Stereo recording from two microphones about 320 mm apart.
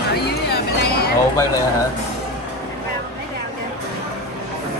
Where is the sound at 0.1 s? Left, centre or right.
Left.